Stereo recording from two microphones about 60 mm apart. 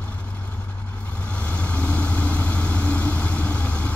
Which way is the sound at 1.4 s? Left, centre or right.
Left.